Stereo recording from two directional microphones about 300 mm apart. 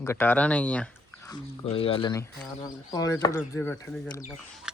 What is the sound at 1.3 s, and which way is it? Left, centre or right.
Speech, centre.